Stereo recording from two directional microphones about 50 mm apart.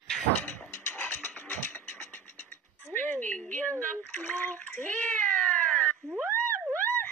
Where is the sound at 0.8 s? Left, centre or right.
Left.